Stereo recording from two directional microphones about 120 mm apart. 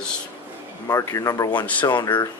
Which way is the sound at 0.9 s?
30° left (ahead or behind).